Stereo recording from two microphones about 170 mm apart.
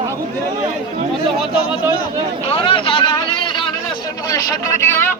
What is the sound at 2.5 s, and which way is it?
Speech, 35° left (ahead or behind).